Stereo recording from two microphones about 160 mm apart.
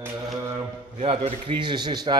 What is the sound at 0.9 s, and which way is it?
A man's voice, 40° right (ahead or behind).